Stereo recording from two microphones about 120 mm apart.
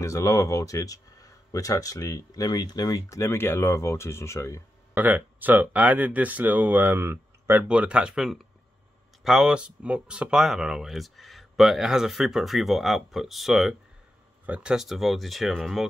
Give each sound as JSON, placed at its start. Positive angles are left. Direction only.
{"t": 0.0, "sound": "speech", "side_deg": 25}
{"t": 4.9, "sound": "speech", "side_deg": -15}
{"t": 7.6, "sound": "speech", "side_deg": -10}